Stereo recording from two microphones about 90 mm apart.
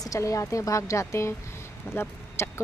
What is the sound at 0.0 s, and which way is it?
Speech, 40° left (ahead or behind).